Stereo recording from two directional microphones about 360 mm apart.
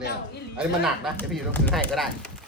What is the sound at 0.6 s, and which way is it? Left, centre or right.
A man's voice, centre.